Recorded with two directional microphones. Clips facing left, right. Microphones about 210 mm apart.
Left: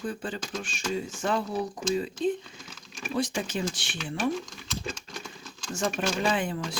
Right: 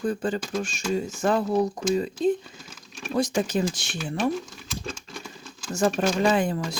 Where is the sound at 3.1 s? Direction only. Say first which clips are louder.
Right 5 dB; 40° right (ahead or behind).